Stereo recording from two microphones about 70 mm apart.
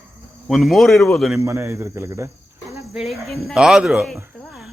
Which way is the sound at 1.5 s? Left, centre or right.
Right.